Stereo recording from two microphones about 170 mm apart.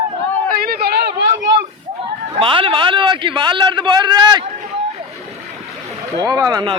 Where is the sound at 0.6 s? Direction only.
65° right (ahead or behind); by 1.6 s 90° right.